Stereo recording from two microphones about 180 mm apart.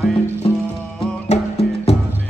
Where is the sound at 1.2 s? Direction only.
35° left (ahead or behind).